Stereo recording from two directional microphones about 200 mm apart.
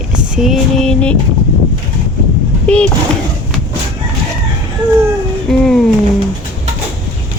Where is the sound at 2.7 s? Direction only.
5° left (ahead or behind).